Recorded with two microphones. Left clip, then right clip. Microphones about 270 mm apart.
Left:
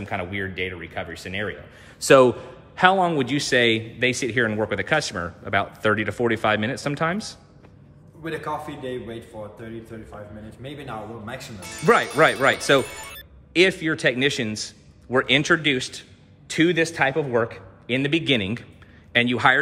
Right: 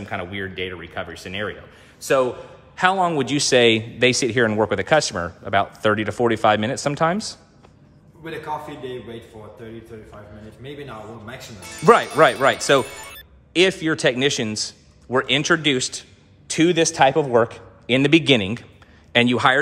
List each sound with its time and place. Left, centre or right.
0.0 s speech: centre
2.0 s a man's voice: left
2.7 s speech: centre
8.2 s a man's voice: centre
10.6 s speech: centre